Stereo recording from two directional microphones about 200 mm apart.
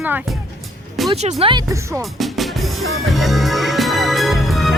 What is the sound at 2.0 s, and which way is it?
Music, centre (ahead or behind).